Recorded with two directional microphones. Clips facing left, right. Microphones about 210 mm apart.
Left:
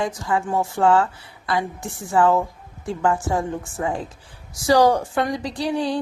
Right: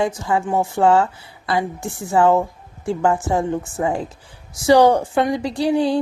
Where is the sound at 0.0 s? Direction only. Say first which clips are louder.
Right 3 dB; 25° right (ahead or behind).